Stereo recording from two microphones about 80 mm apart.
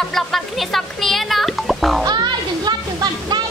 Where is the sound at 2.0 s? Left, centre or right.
Right.